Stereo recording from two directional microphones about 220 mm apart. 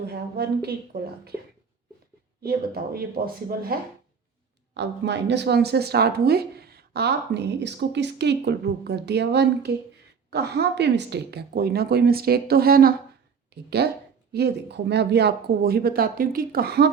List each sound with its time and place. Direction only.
0.1 s speech: 45° right (ahead or behind)
2.4 s speech: 45° right (ahead or behind)